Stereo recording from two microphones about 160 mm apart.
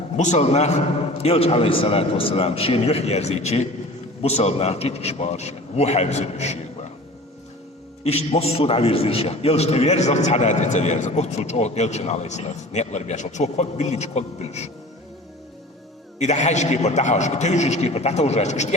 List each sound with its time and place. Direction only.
0.2 s a man's voice: 45° left (ahead or behind)
8.0 s a man's voice: 40° left (ahead or behind)
16.1 s a man's voice: 45° left (ahead or behind)